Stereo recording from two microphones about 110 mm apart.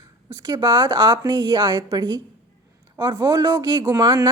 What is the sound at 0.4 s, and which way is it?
Speech, 40° right (ahead or behind).